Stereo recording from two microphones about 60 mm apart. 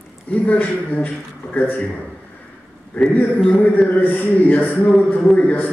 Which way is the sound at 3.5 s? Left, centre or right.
Left.